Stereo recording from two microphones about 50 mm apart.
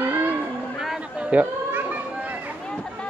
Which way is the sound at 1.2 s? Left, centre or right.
Right.